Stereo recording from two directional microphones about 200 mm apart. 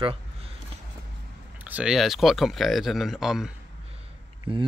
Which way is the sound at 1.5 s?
10° right (ahead or behind).